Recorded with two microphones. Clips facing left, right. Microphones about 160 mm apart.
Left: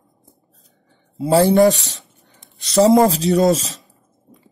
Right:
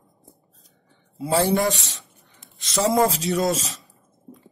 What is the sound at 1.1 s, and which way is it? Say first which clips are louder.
Speech: left 7 dB; 30° left (ahead or behind).